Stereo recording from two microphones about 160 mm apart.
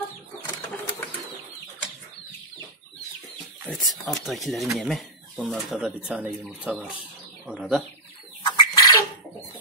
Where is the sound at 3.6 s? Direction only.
Centre (ahead or behind).